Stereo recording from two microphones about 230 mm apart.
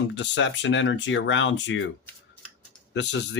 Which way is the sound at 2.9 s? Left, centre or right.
Left.